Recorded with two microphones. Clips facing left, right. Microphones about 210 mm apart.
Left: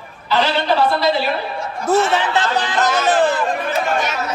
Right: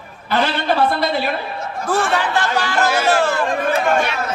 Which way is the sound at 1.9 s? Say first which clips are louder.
Left 3 dB; 20° left (ahead or behind).